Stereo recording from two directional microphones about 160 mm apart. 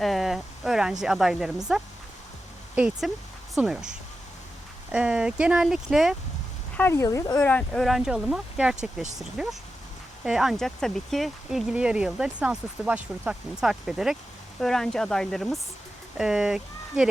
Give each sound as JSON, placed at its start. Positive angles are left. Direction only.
{"t": 0.0, "sound": "a sound", "side_deg": 0}
{"t": 1.0, "sound": "speech", "side_deg": -5}
{"t": 6.7, "sound": "speech", "side_deg": 15}
{"t": 7.4, "sound": "speech", "side_deg": 5}